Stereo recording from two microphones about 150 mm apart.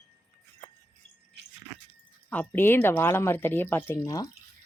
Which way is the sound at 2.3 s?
10° left (ahead or behind).